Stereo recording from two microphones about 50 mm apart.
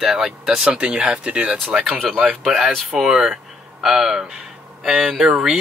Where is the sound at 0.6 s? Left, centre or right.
Right.